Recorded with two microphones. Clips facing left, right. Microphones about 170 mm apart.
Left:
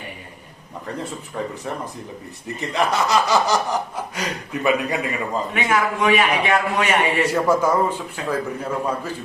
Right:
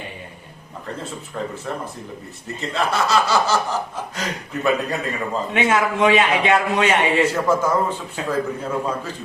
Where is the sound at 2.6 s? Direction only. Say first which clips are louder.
Left 1 dB; 15° left (ahead or behind).